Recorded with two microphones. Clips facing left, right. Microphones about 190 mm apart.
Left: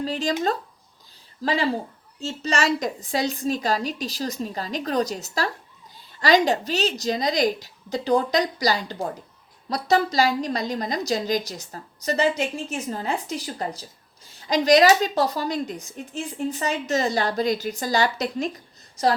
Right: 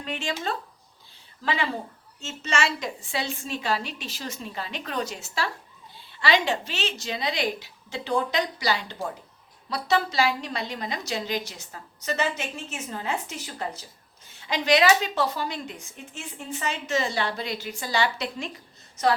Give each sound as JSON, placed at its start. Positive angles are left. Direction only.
{"t": 0.0, "sound": "speech", "side_deg": 35}
{"t": 1.4, "sound": "speech", "side_deg": 35}